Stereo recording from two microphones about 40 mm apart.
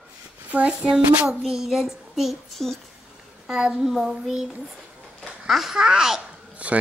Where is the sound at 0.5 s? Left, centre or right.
Right; by 2.4 s centre.